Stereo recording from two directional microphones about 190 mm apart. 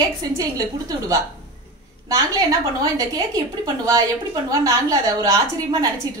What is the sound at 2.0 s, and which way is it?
A woman's voice, 20° right (ahead or behind).